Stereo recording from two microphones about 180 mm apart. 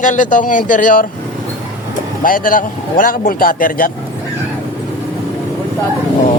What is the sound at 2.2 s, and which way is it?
Speech, 50° left (ahead or behind).